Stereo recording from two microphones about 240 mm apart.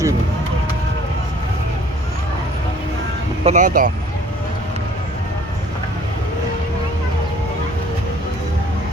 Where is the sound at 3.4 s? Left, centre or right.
Right.